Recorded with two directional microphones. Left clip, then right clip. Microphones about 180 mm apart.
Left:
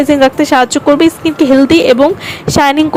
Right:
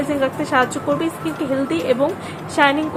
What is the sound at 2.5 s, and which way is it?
Speech, 60° left (ahead or behind).